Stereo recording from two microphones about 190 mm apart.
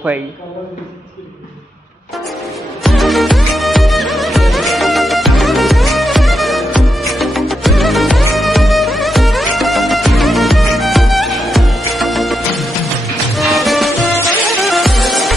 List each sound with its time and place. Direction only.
2.8 s music: centre (ahead or behind)